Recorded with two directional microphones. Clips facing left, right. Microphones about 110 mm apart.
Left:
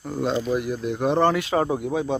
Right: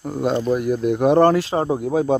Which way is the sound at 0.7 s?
50° right (ahead or behind).